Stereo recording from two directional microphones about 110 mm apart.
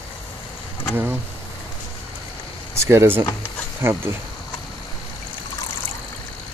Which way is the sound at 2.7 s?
25° right (ahead or behind).